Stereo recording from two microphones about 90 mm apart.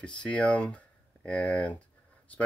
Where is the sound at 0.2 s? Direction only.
10° left (ahead or behind).